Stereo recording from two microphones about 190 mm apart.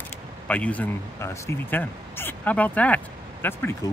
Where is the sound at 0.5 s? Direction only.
5° left (ahead or behind).